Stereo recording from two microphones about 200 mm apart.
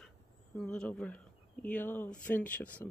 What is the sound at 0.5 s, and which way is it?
Speech, 5° left (ahead or behind).